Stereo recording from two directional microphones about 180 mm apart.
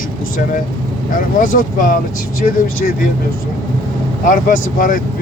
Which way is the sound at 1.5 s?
50° left (ahead or behind).